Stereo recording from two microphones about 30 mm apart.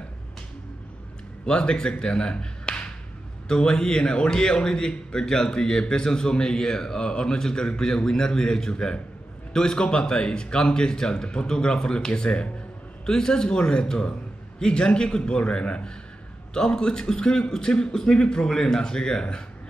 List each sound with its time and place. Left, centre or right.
1.4 s a man's voice: left
16.5 s a man's voice: left